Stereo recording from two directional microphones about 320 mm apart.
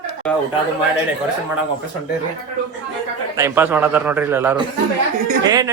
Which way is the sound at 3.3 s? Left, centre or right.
Centre.